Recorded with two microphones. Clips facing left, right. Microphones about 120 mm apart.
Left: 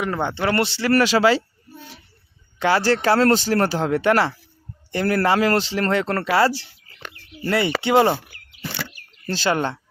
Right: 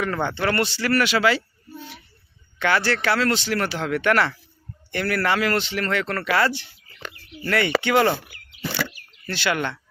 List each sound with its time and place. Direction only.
0.0 s speech: 20° left (ahead or behind); by 1.4 s 35° left (ahead or behind)
2.6 s speech: 35° left (ahead or behind)
8.9 s arrow: 40° left (ahead or behind)